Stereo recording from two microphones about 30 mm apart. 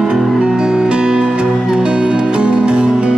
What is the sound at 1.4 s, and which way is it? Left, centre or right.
Music, right.